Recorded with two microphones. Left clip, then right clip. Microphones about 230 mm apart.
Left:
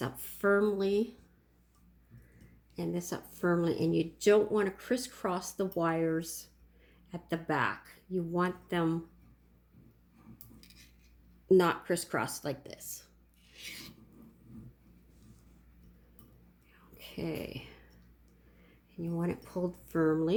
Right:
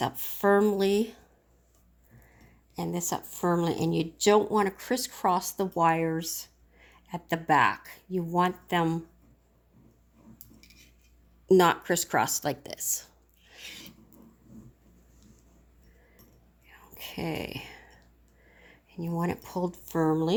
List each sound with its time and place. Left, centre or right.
0.0 s speech: right
2.7 s speech: right
10.6 s cutlery: centre
11.4 s speech: right
13.6 s filing: centre
16.9 s a sound: right
18.9 s speech: right